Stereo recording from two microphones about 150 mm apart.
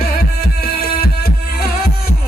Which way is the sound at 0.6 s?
85° left.